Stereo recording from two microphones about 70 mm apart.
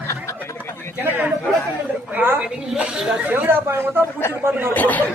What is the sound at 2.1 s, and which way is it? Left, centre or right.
Speech, right.